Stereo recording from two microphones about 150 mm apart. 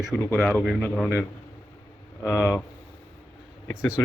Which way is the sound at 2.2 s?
15° left (ahead or behind).